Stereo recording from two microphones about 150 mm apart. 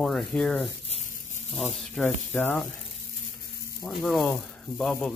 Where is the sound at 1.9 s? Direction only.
5° left (ahead or behind).